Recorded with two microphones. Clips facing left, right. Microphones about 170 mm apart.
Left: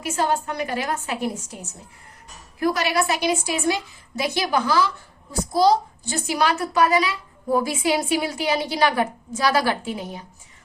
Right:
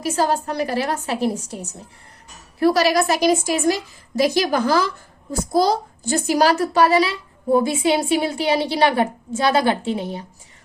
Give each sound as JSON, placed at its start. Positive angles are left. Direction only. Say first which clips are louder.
{"t": 0.0, "sound": "a woman's voice", "louder": "right 3 dB", "side_deg": -35}